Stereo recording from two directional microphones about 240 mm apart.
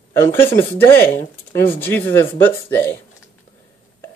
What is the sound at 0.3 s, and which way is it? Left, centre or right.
Speech, centre.